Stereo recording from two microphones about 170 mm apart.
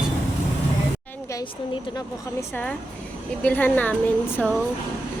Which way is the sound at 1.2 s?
20° left (ahead or behind).